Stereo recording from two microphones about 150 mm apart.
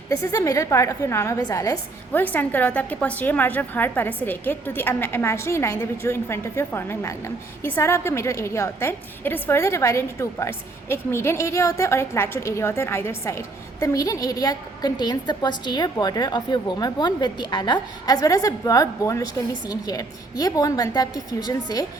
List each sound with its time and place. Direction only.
0.1 s a woman's voice: 20° left (ahead or behind)
2.1 s a woman's voice: 10° left (ahead or behind)